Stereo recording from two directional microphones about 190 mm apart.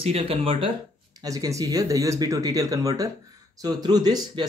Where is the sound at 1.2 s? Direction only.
20° right (ahead or behind).